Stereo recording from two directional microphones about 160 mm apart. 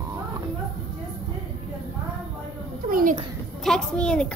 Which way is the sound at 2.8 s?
60° right (ahead or behind).